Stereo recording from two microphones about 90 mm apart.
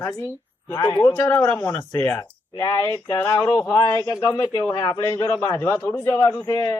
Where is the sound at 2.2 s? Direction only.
55° left (ahead or behind).